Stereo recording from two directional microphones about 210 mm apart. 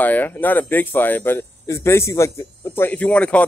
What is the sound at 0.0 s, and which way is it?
A man's voice, 10° left (ahead or behind).